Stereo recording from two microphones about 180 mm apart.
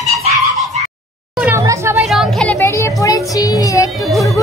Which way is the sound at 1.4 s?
15° right (ahead or behind).